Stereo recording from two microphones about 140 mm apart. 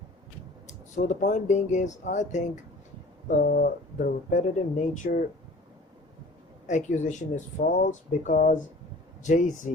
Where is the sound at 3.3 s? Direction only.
80° left.